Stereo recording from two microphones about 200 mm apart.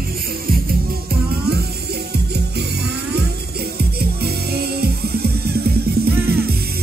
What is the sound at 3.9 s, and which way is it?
Music, 50° right (ahead or behind).